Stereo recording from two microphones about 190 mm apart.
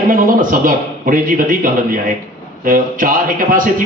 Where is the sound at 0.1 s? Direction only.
45° right (ahead or behind).